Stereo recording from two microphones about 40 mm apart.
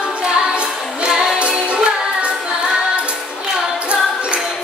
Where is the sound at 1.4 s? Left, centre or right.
Right.